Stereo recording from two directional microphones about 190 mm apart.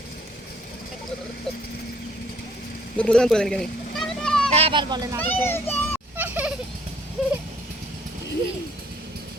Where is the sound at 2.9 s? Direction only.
5° left (ahead or behind).